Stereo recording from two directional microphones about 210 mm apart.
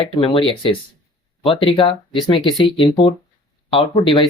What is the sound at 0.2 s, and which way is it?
Speech, 25° left (ahead or behind).